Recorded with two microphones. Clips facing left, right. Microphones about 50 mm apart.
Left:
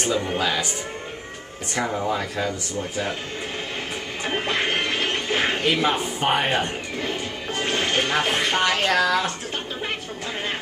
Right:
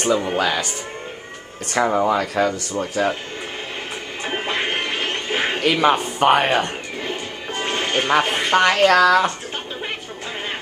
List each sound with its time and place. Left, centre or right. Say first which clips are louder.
0.0 s speech: right 4 dB; right
1.7 s speech: right 7 dB; right
2.0 s speech: right 6 dB; right
4.2 s music: right 1 dB; centre
5.6 s a man's voice: right 4 dB; right
7.0 s music: left 1 dB; centre
8.5 s speech: right 9 dB; right